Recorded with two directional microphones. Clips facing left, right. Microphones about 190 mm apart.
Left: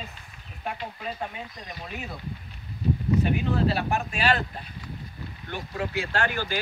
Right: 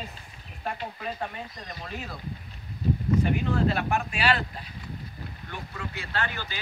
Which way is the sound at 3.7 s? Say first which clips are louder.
Even; 40° left (ahead or behind).